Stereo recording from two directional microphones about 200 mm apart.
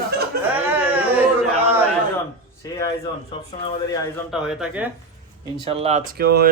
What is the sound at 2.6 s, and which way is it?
Speech, 15° left (ahead or behind).